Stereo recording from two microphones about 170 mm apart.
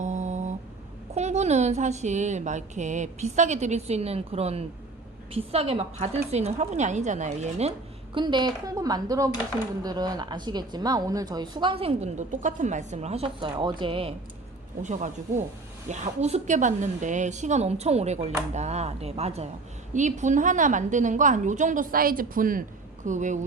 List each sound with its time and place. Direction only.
0.0 s a sound: 45° right (ahead or behind)
1.1 s a woman's voice: 40° right (ahead or behind)
8.1 s a woman's voice: 25° right (ahead or behind)
14.8 s a woman's voice: 45° right (ahead or behind)